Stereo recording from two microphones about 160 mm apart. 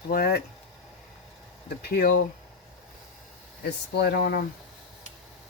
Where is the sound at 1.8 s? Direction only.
80° left.